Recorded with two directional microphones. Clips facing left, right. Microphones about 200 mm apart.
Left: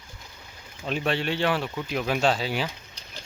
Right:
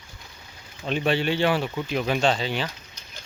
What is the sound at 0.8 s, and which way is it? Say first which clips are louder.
Speech: right 3 dB; centre (ahead or behind).